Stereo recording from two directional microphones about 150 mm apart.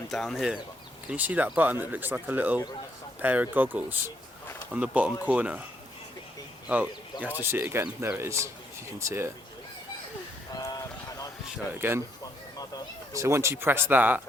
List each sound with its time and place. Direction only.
0.1 s speech: centre (ahead or behind)
6.7 s speech: 10° right (ahead or behind)
10.5 s a sound: 25° left (ahead or behind)
11.5 s speech: 15° right (ahead or behind)
13.1 s speech: 20° right (ahead or behind)